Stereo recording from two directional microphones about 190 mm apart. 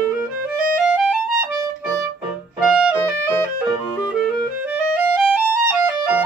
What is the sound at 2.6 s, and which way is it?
Music, 5° right (ahead or behind).